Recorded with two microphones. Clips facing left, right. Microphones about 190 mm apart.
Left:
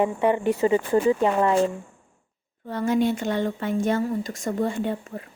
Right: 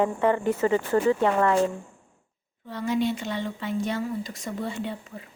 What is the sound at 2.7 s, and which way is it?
Speech, 50° left (ahead or behind).